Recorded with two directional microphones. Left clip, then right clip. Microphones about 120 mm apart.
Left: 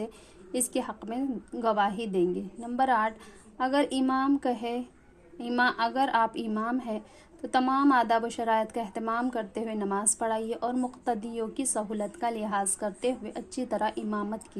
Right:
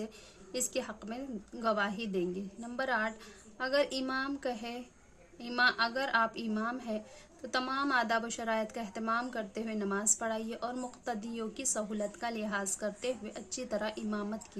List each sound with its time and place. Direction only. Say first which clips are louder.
0.5 s a woman's voice: left 5 dB; 35° left (ahead or behind)